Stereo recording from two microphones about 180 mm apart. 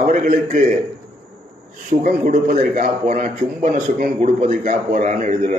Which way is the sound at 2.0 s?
50° right (ahead or behind).